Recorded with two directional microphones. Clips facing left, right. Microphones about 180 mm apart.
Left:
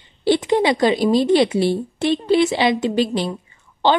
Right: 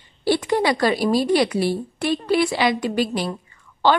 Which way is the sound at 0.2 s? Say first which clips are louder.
Left 3 dB; 20° left (ahead or behind).